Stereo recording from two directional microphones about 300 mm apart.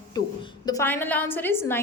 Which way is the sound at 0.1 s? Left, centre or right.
Centre.